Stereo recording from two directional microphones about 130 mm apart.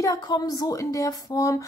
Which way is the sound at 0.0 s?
30° left (ahead or behind).